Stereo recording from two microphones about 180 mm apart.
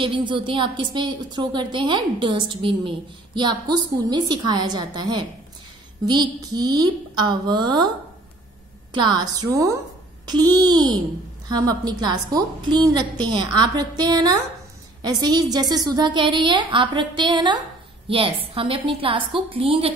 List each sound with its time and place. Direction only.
0.0 s a woman's voice: 25° right (ahead or behind)
8.9 s a woman's voice: 25° right (ahead or behind)